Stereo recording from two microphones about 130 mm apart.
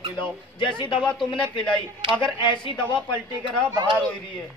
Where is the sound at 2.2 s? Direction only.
40° left (ahead or behind).